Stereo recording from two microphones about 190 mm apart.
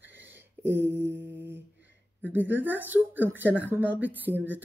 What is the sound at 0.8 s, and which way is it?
Speech, 15° right (ahead or behind).